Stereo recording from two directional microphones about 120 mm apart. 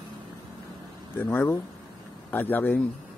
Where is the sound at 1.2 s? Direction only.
15° left (ahead or behind).